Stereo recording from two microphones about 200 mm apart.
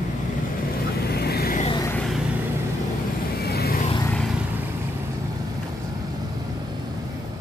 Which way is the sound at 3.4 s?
50° left (ahead or behind).